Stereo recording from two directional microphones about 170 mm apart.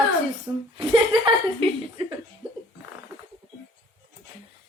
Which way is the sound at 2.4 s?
5° right (ahead or behind).